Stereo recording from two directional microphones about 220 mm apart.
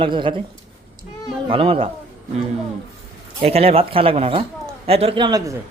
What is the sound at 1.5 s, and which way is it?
Speech, 25° right (ahead or behind).